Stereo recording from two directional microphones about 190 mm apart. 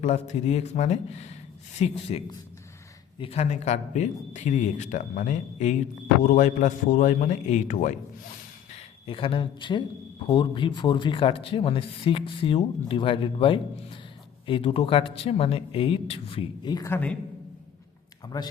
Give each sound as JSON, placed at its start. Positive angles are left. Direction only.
{"t": 0.0, "sound": "speech", "side_deg": 35}
{"t": 8.7, "sound": "speech", "side_deg": 30}